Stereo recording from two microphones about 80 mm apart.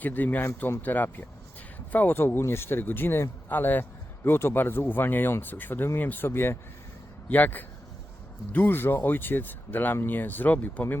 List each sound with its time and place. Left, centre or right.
0.0 s speech: left